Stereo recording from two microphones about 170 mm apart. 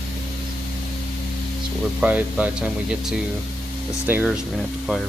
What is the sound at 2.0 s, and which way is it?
Speech, 10° right (ahead or behind).